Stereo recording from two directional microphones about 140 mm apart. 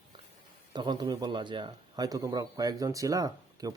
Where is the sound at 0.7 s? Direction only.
30° right (ahead or behind).